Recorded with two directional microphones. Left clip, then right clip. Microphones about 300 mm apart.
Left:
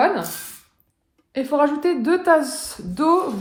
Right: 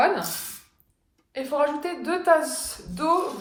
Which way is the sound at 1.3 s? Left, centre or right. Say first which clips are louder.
Left 5 dB; left.